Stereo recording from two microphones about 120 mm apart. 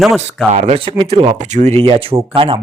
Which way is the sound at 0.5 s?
65° right (ahead or behind).